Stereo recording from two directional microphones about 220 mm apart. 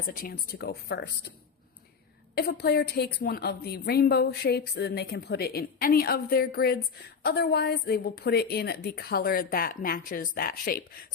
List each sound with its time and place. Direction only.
0.2 s a woman's voice: 40° left (ahead or behind)
2.3 s a woman's voice: 45° left (ahead or behind)